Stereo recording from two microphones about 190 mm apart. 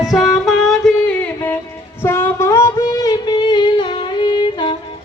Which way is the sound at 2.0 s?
10° left (ahead or behind).